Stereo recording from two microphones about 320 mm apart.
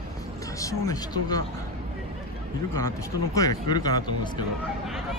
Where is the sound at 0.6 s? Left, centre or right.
Centre.